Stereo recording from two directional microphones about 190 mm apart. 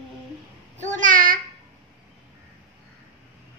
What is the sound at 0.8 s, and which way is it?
Speech, 45° right (ahead or behind).